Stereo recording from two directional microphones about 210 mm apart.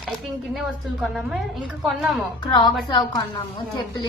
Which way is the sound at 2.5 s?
20° left (ahead or behind).